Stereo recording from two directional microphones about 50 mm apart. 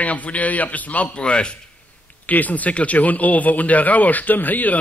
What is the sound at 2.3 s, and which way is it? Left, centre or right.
A man's voice, left.